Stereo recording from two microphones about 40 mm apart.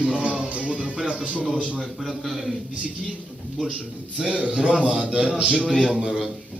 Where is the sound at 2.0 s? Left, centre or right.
Centre.